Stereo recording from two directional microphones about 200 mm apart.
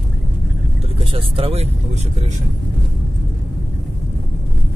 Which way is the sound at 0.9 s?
30° right (ahead or behind).